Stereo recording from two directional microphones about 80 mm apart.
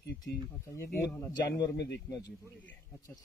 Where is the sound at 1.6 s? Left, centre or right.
Left.